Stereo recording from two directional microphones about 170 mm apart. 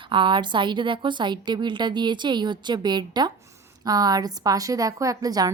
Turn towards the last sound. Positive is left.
turn(degrees=-20)  # may be behind; listen again after turning